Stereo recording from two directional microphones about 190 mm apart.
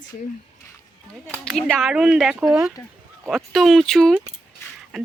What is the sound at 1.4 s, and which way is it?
Speech, centre (ahead or behind).